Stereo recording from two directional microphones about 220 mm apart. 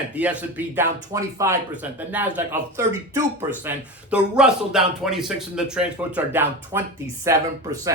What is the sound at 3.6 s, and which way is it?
Speech, 5° right (ahead or behind).